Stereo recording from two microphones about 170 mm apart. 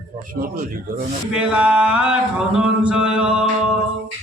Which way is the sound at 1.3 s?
5° right (ahead or behind).